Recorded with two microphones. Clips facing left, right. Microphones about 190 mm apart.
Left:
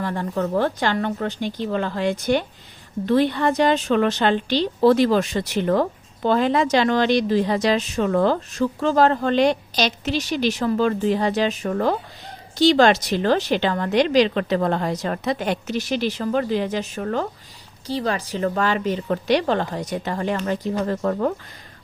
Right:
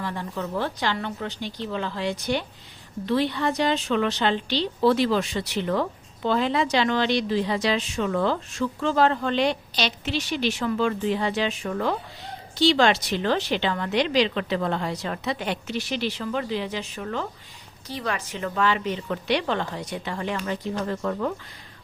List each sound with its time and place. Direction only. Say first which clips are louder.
0.0 s a woman's voice: left 6 dB; 50° left (ahead or behind)
17.8 s a woman's voice: left 6 dB; 30° left (ahead or behind)